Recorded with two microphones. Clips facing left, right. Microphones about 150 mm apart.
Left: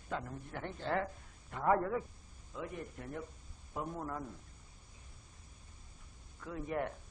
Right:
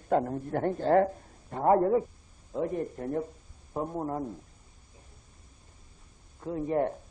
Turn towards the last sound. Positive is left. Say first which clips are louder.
# right 10 dB
turn(degrees=-35)  # may be behind; listen again after turning